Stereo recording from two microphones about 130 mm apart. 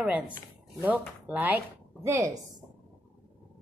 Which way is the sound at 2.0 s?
25° right (ahead or behind).